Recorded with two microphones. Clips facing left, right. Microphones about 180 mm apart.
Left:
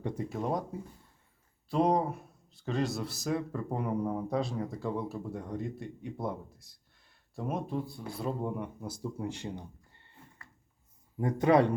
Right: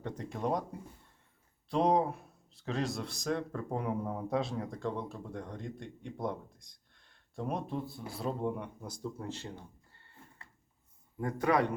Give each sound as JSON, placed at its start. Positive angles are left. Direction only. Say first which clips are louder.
{"t": 0.0, "sound": "speech", "louder": "left 2 dB", "side_deg": 10}
{"t": 11.2, "sound": "a man's voice", "louder": "left 5 dB", "side_deg": 20}